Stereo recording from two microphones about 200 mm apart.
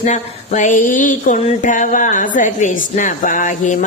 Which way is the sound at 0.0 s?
35° left (ahead or behind).